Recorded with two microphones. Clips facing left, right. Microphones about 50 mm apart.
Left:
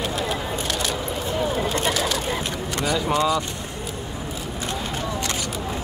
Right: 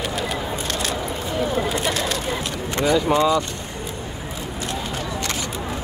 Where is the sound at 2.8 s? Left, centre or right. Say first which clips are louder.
Right 4 dB; right.